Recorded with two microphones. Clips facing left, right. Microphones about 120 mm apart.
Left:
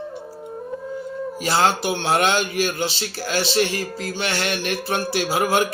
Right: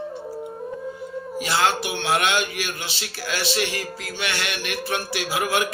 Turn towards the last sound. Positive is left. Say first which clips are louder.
# left 4 dB
turn(degrees=35)  # may be behind; listen again after turning